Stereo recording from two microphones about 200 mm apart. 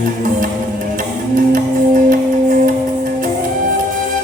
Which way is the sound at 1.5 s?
45° right (ahead or behind).